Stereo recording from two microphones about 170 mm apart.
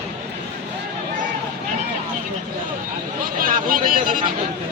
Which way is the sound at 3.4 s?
55° right (ahead or behind).